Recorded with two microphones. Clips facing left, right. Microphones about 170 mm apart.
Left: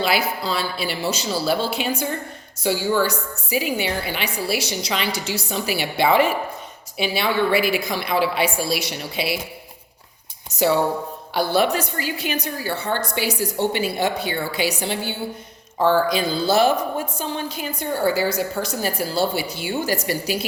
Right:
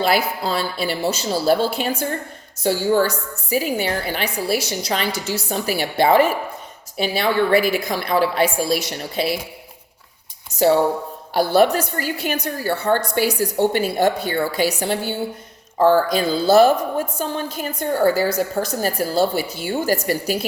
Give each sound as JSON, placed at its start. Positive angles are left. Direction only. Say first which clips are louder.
{"t": 0.0, "sound": "a woman's voice", "louder": "right 2 dB", "side_deg": -50}
{"t": 11.3, "sound": "a woman's voice", "louder": "right 4 dB", "side_deg": -50}